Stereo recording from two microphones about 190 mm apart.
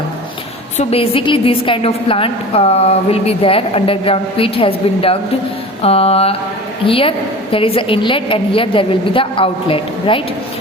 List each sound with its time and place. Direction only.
0.8 s a woman's voice: 30° left (ahead or behind)
5.8 s mantra: 30° left (ahead or behind)
6.8 s a woman's voice: 30° left (ahead or behind)